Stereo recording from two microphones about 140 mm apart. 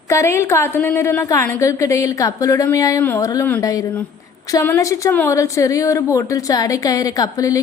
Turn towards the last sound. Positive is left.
turn(degrees=25)  # may be behind; listen again after turning